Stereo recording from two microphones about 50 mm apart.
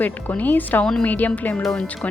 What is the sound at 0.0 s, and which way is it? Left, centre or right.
Speech, left.